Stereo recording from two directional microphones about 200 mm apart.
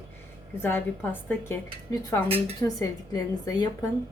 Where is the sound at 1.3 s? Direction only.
15° left (ahead or behind).